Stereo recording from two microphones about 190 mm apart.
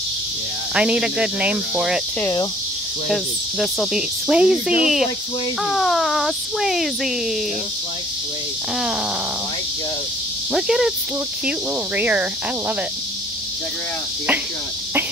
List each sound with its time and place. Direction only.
0.7 s speech: 5° right (ahead or behind)
3.1 s speech: centre (ahead or behind)
10.5 s speech: centre (ahead or behind)